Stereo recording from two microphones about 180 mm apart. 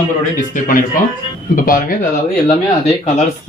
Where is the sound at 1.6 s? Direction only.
50° left (ahead or behind).